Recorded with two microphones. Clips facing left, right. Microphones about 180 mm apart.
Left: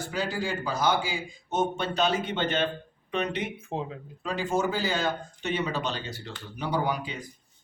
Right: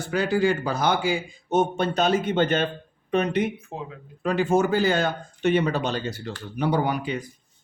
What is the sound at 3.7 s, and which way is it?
Speech, 25° left (ahead or behind).